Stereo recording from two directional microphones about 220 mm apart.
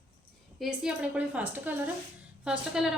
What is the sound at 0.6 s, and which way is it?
A woman's voice, 5° right (ahead or behind).